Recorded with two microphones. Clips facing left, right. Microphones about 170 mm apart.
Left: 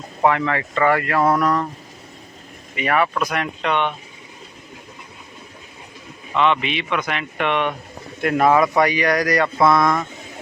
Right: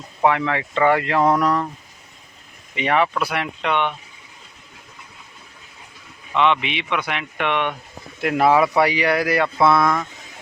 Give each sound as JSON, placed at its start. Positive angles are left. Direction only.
{"t": 0.2, "sound": "speech", "side_deg": -10}
{"t": 2.7, "sound": "speech", "side_deg": -20}
{"t": 3.2, "sound": "speech", "side_deg": -10}
{"t": 6.3, "sound": "speech", "side_deg": -15}